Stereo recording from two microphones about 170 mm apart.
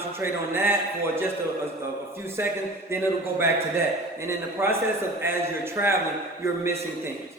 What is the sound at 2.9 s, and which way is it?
A man's voice, 15° right (ahead or behind).